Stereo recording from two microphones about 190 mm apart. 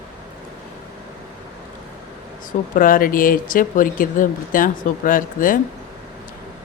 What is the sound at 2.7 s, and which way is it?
Speech, 45° left (ahead or behind).